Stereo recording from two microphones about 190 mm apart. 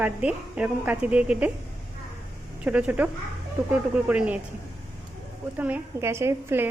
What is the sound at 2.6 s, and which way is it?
A woman's voice, 5° right (ahead or behind).